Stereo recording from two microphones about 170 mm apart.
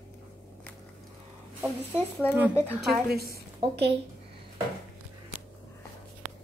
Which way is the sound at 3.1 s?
65° right (ahead or behind).